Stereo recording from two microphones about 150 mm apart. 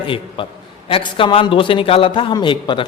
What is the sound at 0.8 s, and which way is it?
A man's voice, 35° left (ahead or behind).